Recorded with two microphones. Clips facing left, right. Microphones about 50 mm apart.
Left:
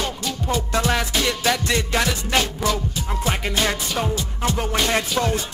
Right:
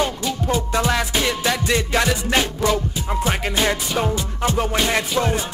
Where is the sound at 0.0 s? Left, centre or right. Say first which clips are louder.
Right 4 dB; centre.